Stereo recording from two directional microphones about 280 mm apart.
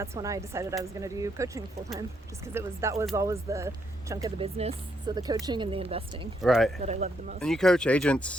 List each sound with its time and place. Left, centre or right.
0.0 s speech: centre
6.4 s speech: centre
6.7 s speech: right
7.3 s speech: centre